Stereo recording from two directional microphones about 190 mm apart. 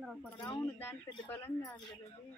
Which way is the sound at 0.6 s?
10° left (ahead or behind).